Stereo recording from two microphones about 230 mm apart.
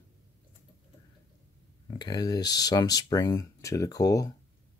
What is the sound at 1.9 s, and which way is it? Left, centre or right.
Speech, centre.